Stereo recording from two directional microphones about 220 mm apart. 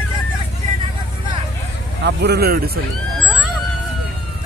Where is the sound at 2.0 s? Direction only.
50° right (ahead or behind).